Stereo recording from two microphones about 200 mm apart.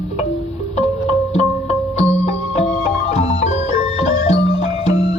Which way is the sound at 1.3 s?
35° left (ahead or behind).